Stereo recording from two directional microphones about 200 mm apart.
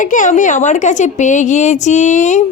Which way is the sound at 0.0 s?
40° left (ahead or behind).